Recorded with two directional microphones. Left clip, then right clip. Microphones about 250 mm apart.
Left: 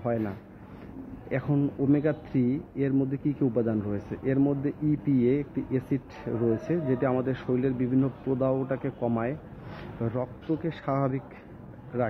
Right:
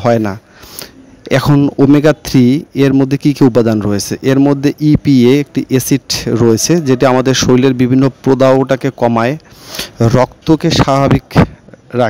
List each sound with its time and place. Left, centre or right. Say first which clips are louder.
0.0 s a man's voice: right 18 dB; right